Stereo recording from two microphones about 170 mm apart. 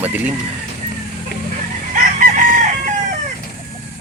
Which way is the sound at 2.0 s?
50° right (ahead or behind).